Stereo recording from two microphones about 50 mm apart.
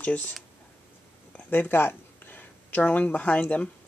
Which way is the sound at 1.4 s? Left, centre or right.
Left.